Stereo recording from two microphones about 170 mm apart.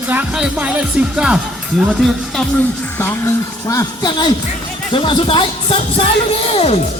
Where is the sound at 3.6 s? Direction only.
20° left (ahead or behind).